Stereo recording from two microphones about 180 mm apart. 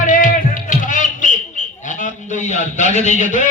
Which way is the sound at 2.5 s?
40° left (ahead or behind).